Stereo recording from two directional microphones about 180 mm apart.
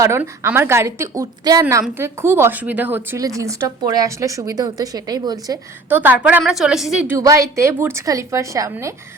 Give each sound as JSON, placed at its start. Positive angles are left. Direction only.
{"t": 0.0, "sound": "a woman's voice", "side_deg": -15}
{"t": 5.9, "sound": "a woman's voice", "side_deg": -10}
{"t": 7.2, "sound": "a woman's voice", "side_deg": -20}